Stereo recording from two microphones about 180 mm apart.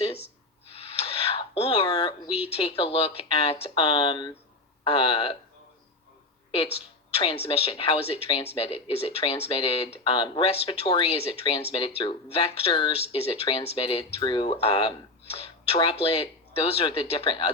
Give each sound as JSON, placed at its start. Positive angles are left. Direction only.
{"t": 0.7, "sound": "a sound", "side_deg": 35}
{"t": 2.5, "sound": "speech", "side_deg": 30}
{"t": 7.2, "sound": "speech", "side_deg": 30}